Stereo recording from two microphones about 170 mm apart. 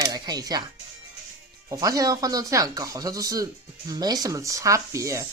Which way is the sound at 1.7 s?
20° right (ahead or behind).